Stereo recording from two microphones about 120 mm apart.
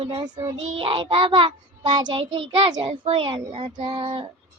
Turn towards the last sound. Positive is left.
turn(degrees=-50)  # may be behind; listen again after turning